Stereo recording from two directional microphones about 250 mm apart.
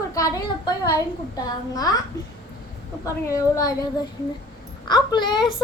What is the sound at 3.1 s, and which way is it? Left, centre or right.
Speech, centre.